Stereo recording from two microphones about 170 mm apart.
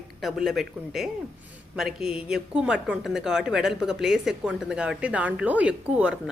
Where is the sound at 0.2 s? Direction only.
Centre (ahead or behind).